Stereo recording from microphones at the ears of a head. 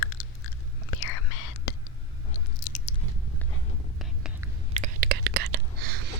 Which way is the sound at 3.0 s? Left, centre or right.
Right.